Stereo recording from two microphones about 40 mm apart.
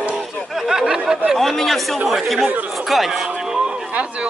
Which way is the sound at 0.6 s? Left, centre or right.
Centre.